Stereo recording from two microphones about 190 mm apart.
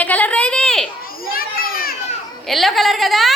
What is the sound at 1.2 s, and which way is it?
Children playing, 50° left (ahead or behind).